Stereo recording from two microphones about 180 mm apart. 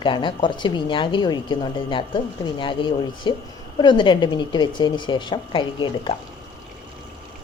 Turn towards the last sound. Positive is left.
turn(degrees=25)  # may be behind; listen again after turning